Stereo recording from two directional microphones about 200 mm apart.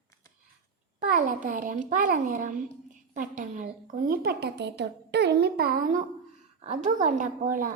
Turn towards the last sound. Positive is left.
turn(degrees=-45)  # may be behind; listen again after turning